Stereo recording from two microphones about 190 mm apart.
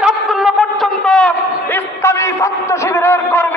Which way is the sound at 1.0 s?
5° left (ahead or behind).